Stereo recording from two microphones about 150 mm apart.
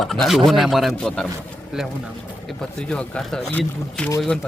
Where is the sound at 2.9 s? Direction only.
5° left (ahead or behind).